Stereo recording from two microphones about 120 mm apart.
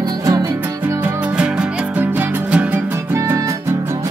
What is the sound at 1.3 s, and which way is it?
Music, 10° right (ahead or behind).